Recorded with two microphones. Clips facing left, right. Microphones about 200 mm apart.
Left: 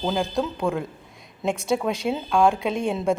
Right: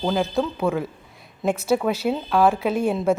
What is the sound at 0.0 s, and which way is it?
A woman's voice, centre (ahead or behind).